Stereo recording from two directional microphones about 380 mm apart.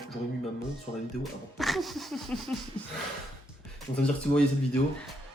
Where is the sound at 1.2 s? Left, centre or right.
Centre.